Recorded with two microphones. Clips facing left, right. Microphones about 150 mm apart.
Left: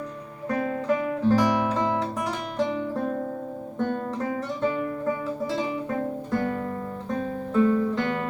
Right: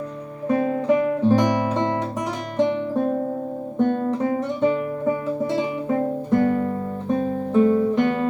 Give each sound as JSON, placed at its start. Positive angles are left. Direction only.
{"t": 0.4, "sound": "music", "side_deg": -20}
{"t": 2.6, "sound": "guitar", "side_deg": -20}
{"t": 3.8, "sound": "music", "side_deg": -20}
{"t": 7.1, "sound": "guitar", "side_deg": -15}